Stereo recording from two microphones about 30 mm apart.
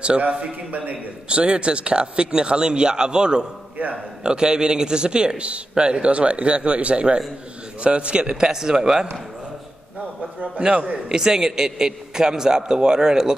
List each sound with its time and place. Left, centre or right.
0.3 s speech: right
0.7 s a man's voice: right
1.3 s a man's voice: right
8.4 s a man's voice: right
10.6 s a man's voice: right
11.1 s a man's voice: centre